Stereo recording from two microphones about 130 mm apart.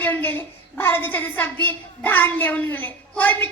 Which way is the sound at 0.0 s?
15° left (ahead or behind).